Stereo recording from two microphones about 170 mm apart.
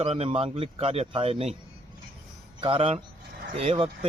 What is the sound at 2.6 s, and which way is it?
Speech, 35° right (ahead or behind).